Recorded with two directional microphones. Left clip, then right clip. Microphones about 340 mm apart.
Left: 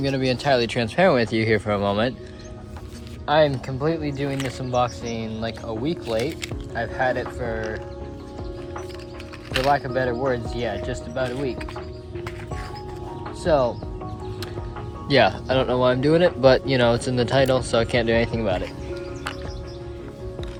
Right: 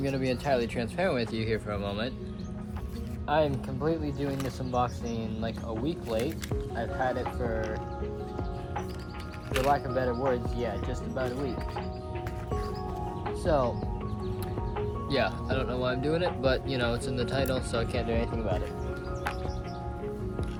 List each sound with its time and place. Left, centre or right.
0.0 s speech: left
3.2 s speech: left
9.5 s speech: left
13.4 s speech: left
15.1 s speech: centre